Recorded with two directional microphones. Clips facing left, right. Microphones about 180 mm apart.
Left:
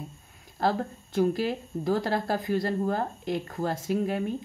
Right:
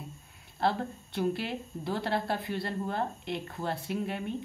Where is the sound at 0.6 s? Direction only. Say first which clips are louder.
Left 3 dB; 40° left (ahead or behind).